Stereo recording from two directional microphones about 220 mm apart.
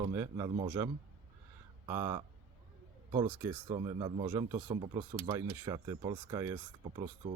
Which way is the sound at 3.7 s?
25° right (ahead or behind).